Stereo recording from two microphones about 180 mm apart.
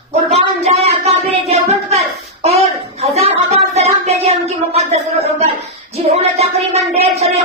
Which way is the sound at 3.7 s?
35° right (ahead or behind).